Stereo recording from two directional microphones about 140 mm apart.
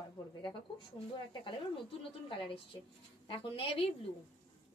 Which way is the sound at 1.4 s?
40° left (ahead or behind).